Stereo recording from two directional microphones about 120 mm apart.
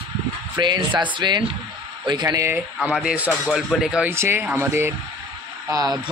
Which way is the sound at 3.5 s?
5° right (ahead or behind).